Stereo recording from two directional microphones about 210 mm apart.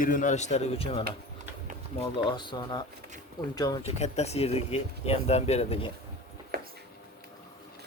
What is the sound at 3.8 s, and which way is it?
Speech, 30° left (ahead or behind).